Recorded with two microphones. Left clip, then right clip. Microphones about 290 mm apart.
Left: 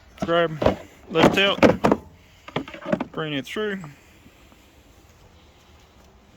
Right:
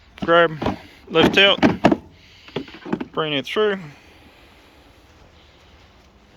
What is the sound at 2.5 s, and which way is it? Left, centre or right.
Rowboat, centre.